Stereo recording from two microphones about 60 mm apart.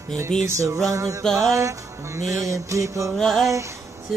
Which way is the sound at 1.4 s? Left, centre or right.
Right.